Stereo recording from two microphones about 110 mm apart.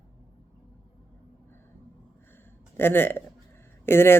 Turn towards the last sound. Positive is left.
turn(degrees=20)  # may be behind; listen again after turning